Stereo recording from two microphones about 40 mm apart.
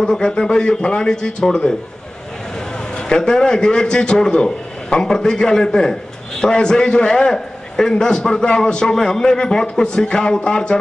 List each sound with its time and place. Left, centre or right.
0.0 s a man's voice: left
3.0 s a man's voice: centre